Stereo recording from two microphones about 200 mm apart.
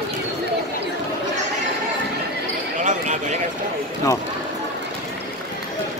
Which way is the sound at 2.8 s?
35° right (ahead or behind).